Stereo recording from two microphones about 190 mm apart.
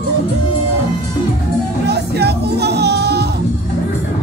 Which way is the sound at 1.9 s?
60° right (ahead or behind).